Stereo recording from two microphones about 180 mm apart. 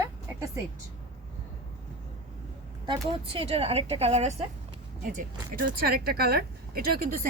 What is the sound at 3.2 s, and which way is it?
A woman's voice, 30° right (ahead or behind).